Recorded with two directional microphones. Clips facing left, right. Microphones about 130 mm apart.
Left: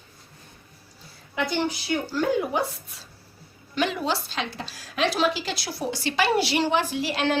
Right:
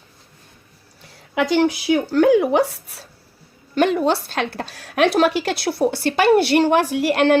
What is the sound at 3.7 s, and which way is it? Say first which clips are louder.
A woman's voice: right 8 dB; 50° right (ahead or behind).